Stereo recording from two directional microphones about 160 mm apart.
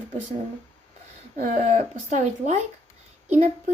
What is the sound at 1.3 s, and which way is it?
Speech, 50° right (ahead or behind).